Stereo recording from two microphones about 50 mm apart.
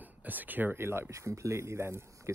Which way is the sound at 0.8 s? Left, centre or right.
Right.